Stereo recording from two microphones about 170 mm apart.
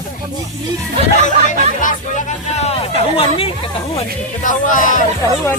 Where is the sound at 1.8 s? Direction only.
50° left (ahead or behind); by 3.5 s 35° left (ahead or behind).